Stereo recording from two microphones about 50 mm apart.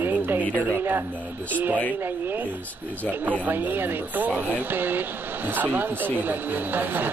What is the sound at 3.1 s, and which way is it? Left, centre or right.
Speech, right.